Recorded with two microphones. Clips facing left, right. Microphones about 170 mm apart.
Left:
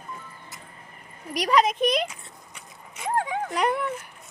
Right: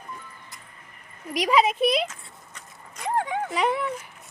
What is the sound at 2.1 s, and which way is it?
Speech, 10° left (ahead or behind).